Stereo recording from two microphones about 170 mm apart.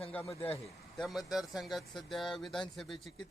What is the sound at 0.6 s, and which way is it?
Speech, centre (ahead or behind).